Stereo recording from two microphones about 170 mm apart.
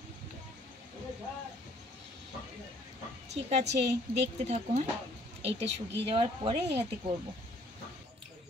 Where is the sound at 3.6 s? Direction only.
90° right.